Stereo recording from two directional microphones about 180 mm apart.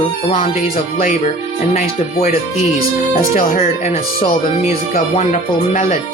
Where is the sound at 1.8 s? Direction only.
40° left (ahead or behind).